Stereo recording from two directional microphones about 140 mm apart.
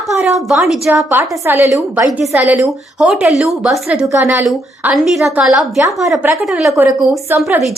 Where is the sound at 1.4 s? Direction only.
20° right (ahead or behind); by 4.1 s centre (ahead or behind).